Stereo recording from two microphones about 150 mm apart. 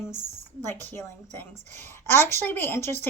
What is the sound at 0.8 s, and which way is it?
A woman's voice, 15° left (ahead or behind).